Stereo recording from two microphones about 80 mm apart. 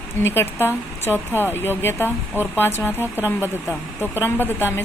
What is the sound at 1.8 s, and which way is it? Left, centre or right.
Speech, left.